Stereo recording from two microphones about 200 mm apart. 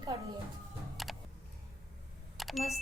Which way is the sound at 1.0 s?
Centre (ahead or behind).